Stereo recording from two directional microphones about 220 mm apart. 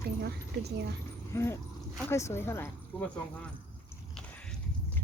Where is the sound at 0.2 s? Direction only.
45° right (ahead or behind).